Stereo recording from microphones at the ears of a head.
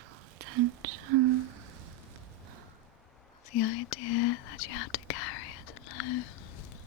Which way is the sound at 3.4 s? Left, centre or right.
Left.